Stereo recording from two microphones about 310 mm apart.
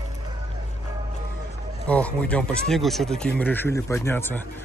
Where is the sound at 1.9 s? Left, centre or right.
Centre.